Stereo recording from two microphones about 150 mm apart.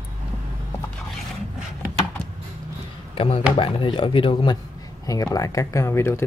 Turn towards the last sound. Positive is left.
turn(degrees=15)  # may be behind; listen again after turning